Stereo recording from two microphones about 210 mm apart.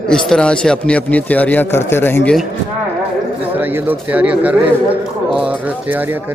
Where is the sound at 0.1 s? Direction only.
5° left (ahead or behind).